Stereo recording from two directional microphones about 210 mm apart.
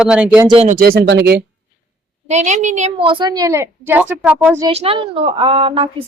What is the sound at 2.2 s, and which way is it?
Speech, 35° right (ahead or behind).